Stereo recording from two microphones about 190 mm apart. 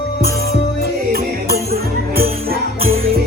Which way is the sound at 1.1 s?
55° right (ahead or behind).